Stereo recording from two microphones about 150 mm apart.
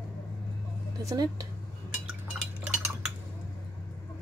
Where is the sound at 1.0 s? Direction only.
20° right (ahead or behind).